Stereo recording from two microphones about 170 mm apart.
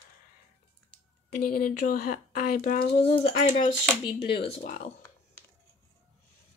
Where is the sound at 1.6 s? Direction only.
55° left (ahead or behind).